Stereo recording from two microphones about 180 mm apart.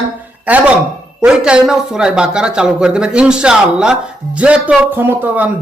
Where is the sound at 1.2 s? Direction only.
5° right (ahead or behind).